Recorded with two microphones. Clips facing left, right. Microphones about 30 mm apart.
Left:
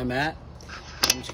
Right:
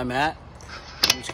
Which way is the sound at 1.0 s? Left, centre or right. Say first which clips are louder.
Right 3 dB; right.